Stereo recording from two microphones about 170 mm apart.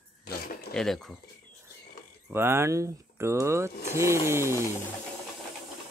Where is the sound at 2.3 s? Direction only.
15° right (ahead or behind).